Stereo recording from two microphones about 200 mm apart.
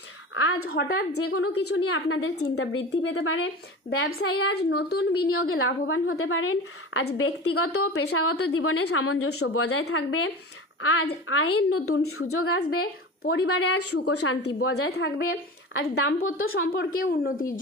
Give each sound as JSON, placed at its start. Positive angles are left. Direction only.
{"t": 0.7, "sound": "a woman's voice", "side_deg": 50}
{"t": 1.2, "sound": "a woman's voice", "side_deg": 85}
{"t": 4.3, "sound": "a woman's voice", "side_deg": 55}
{"t": 5.3, "sound": "a woman's voice", "side_deg": 90}
{"t": 12.8, "sound": "speech", "side_deg": 50}
{"t": 13.5, "sound": "a woman's voice", "side_deg": 90}
{"t": 13.7, "sound": "a woman's voice", "side_deg": 55}
{"t": 14.8, "sound": "a woman's voice", "side_deg": 55}
{"t": 15.2, "sound": "speech", "side_deg": 85}
{"t": 15.8, "sound": "a woman's voice", "side_deg": 50}